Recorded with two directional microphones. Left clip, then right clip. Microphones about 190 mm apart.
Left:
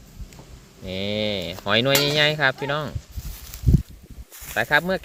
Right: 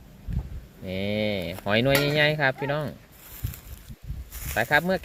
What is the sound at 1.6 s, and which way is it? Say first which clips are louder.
Speech: left 3 dB; centre (ahead or behind).